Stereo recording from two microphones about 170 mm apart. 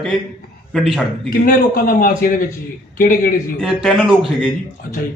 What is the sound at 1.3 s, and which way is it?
A man's voice, 60° left (ahead or behind).